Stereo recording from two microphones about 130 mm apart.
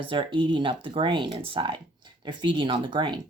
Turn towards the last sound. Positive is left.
turn(degrees=-35)  # may be behind; listen again after turning